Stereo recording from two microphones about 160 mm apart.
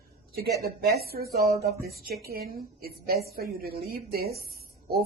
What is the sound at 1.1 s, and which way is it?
A woman's voice, 75° right (ahead or behind).